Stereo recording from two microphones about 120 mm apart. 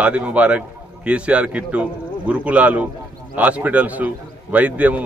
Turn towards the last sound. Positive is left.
turn(degrees=-10)  # may be behind; listen again after turning